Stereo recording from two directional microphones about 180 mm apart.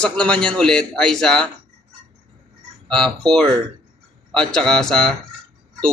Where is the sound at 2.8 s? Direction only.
5° left (ahead or behind).